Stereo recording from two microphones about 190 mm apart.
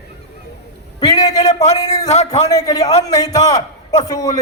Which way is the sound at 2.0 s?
35° left (ahead or behind).